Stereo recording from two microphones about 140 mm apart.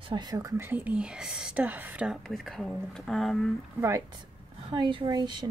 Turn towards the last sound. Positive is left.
turn(degrees=-30)  # may be behind; listen again after turning